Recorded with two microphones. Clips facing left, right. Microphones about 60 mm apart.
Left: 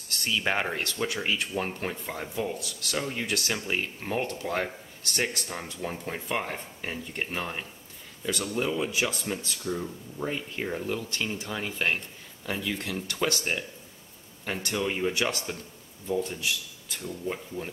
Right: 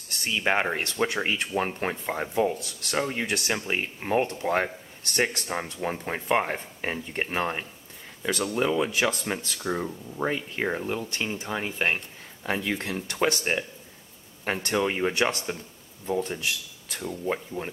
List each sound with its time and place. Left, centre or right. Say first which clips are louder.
0.4 s speech: right 4 dB; centre
0.8 s speech: right 3 dB; right
12.4 s speech: right 3 dB; right
17.6 s speech: right 2 dB; right